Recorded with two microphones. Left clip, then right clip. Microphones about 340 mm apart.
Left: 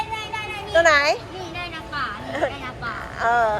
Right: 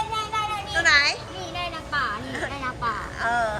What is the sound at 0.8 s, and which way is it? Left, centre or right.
Speech, centre.